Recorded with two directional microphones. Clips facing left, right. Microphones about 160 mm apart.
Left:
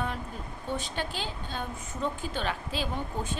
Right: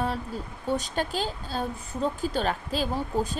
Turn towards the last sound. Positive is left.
turn(degrees=-35)  # may be behind; listen again after turning